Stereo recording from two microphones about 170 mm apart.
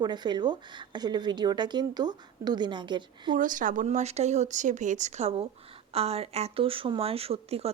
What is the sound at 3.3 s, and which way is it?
Speech, 50° right (ahead or behind).